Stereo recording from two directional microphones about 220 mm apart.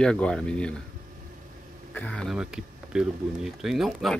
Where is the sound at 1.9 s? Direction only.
5° left (ahead or behind).